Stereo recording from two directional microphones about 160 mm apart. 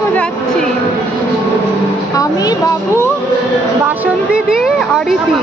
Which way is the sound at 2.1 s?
20° left (ahead or behind).